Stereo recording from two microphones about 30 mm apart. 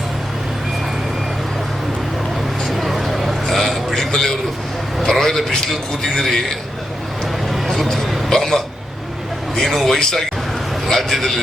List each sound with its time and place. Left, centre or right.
2.6 s vehicle: centre
3.4 s a sound: centre
5.6 s a man's voice: centre
7.4 s a sound: centre
8.3 s hiccup: centre
9.6 s a man's voice: centre